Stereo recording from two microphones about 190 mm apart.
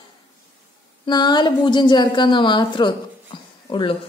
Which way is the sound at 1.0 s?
25° left (ahead or behind).